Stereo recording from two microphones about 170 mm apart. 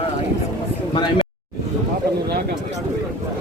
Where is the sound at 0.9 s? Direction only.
30° left (ahead or behind).